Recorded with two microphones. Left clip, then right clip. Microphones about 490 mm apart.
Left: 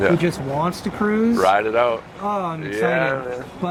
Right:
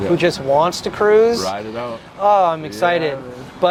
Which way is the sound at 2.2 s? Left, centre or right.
Right.